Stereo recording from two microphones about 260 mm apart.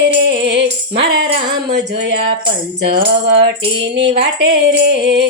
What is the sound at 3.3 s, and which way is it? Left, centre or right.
Speech, right.